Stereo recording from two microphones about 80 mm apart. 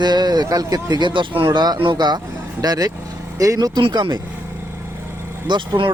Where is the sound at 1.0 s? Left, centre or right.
Right.